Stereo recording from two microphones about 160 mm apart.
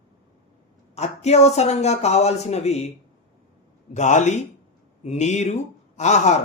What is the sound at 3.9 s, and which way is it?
A man's voice, 50° left (ahead or behind).